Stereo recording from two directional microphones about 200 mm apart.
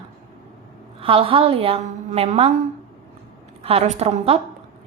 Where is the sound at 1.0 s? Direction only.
25° right (ahead or behind).